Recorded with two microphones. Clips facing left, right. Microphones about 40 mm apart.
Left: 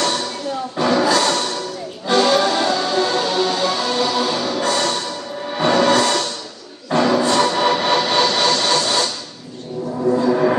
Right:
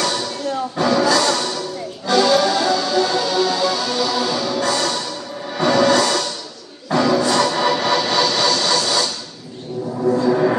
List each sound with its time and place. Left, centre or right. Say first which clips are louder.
0.7 s music: even; left
1.1 s music: even; left
10.1 s a sound: even; centre